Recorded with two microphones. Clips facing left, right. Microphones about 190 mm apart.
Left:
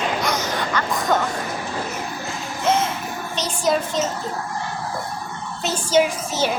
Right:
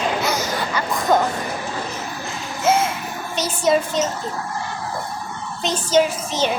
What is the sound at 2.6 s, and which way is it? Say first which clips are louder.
Music: right 2 dB; 10° right (ahead or behind).